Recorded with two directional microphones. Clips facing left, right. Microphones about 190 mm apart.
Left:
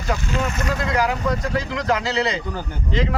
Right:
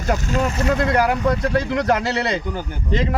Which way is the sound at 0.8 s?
55° right (ahead or behind).